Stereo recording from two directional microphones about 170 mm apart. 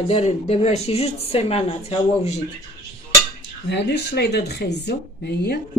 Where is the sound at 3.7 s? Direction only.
85° left.